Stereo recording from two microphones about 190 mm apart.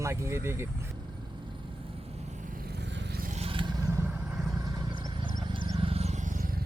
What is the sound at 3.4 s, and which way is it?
Vehicle, 25° right (ahead or behind).